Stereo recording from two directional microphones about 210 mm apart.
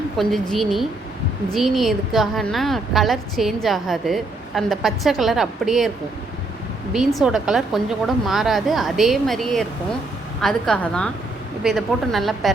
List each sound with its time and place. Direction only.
0.2 s a woman's voice: centre (ahead or behind)
6.9 s a woman's voice: centre (ahead or behind)